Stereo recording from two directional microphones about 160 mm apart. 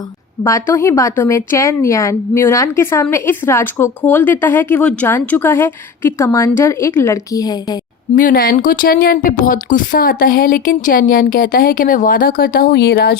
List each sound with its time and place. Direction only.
0.4 s a woman's voice: 20° left (ahead or behind)
8.1 s a woman's voice: 60° left (ahead or behind); by 13.1 s 85° left